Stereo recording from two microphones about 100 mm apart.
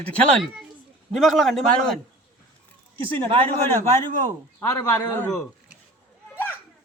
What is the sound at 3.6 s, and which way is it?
A man's voice, 25° left (ahead or behind).